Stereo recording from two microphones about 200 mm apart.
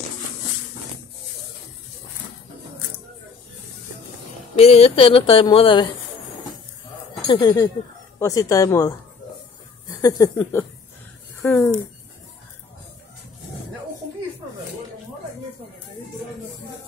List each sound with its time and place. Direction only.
4.6 s speech: 30° left (ahead or behind)
7.2 s speech: 25° left (ahead or behind)
10.0 s speech: 20° left (ahead or behind)